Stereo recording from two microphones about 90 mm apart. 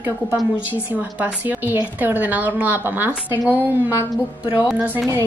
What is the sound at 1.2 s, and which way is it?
A woman's voice, 20° right (ahead or behind).